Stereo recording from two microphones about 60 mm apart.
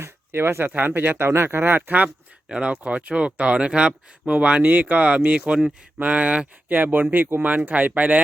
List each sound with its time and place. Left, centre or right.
0.0 s a sound: right
0.7 s speech: right
2.5 s speech: centre
6.7 s speech: right